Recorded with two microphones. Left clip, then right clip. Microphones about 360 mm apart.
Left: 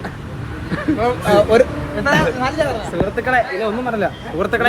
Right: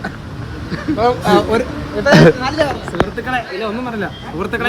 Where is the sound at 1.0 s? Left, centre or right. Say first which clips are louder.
Right 3 dB; right.